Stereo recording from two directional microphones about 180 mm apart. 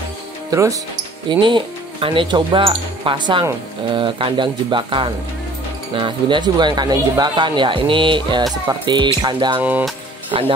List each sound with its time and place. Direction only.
0.5 s speech: 20° right (ahead or behind)
9.6 s speech: 10° right (ahead or behind)
10.3 s speech: 30° right (ahead or behind)